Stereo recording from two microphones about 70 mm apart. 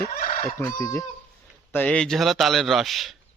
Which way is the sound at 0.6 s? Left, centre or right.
Left.